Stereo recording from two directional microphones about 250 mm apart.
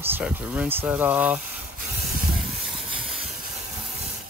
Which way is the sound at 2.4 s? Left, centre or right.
Centre.